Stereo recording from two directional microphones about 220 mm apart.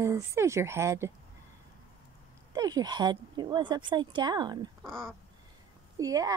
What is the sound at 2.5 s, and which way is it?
Speech, 20° right (ahead or behind).